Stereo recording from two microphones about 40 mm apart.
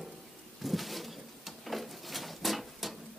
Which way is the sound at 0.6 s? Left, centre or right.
Centre.